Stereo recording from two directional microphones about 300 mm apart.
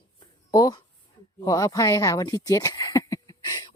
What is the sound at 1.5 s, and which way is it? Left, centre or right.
Speech, centre.